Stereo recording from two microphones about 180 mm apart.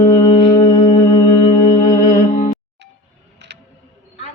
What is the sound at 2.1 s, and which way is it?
Music, 45° left (ahead or behind).